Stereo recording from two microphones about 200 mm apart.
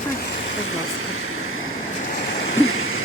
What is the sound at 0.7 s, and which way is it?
Vehicle, 90° left.